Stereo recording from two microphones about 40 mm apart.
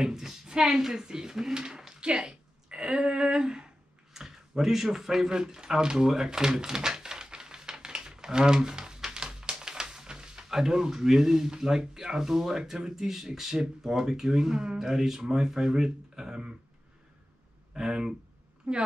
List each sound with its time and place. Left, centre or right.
0.0 s a sound: centre
0.7 s speech: centre
2.1 s a sound: right
10.5 s speech: centre
14.8 s speech: centre
17.7 s speech: centre
18.7 s a woman's voice: right